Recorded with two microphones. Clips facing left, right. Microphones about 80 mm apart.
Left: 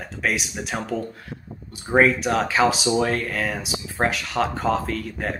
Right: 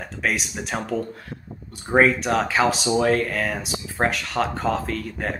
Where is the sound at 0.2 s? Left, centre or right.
Centre.